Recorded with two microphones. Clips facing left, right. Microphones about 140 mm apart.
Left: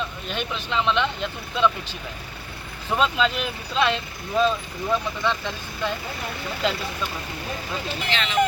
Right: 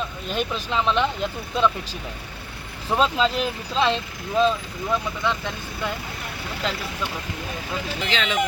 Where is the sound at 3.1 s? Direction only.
30° right (ahead or behind).